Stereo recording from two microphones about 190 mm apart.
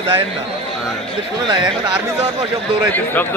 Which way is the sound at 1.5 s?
25° right (ahead or behind).